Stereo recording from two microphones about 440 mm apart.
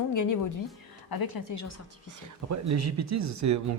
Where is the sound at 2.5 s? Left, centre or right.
Right.